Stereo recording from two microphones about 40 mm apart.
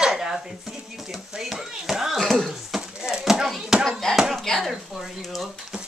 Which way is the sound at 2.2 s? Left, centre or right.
Centre.